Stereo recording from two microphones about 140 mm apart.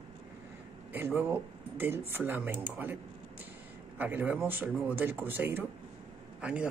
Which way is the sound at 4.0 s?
10° right (ahead or behind).